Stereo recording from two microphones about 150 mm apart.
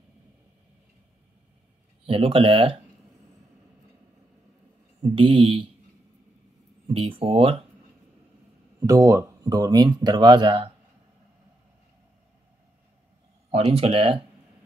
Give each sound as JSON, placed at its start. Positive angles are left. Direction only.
{"t": 2.0, "sound": "speech", "side_deg": -40}
{"t": 5.0, "sound": "speech", "side_deg": -35}
{"t": 6.9, "sound": "speech", "side_deg": -35}
{"t": 8.7, "sound": "speech", "side_deg": -20}
{"t": 13.5, "sound": "speech", "side_deg": -40}